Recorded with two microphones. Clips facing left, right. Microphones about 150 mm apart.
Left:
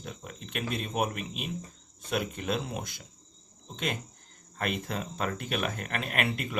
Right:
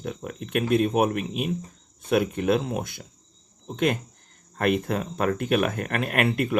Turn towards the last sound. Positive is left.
turn(degrees=-50)  # may be behind; listen again after turning